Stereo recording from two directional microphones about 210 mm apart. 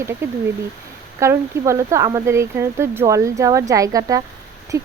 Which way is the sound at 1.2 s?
15° right (ahead or behind).